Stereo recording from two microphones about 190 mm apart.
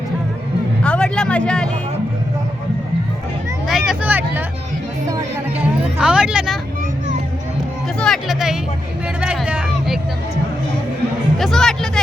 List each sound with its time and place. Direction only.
0.8 s music: 5° left (ahead or behind)
3.7 s vehicle: centre (ahead or behind)
5.0 s music: 15° right (ahead or behind)
6.0 s a sound: 5° right (ahead or behind)
7.9 s speech: centre (ahead or behind)
9.2 s a sound: 5° right (ahead or behind)
11.3 s speech: centre (ahead or behind)